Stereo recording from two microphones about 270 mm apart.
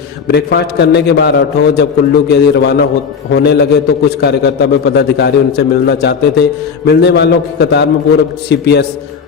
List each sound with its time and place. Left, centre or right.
0.3 s a man's voice: left